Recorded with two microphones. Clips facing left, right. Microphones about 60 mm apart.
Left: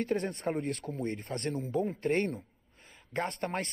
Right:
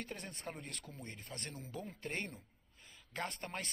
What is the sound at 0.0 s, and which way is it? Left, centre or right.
Speech, left.